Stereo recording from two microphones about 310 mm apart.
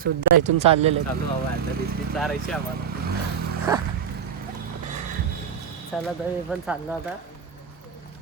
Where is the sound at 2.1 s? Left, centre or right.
Centre.